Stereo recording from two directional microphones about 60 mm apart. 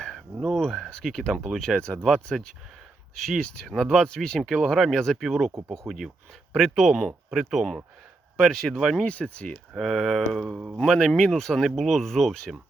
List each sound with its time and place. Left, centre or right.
0.4 s speech: centre
2.3 s speech: centre
3.2 s speech: centre
9.0 s speech: centre
9.7 s speech: centre
10.4 s speech: centre
10.8 s speech: centre